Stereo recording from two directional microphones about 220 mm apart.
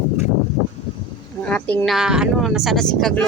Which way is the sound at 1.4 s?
5° left (ahead or behind).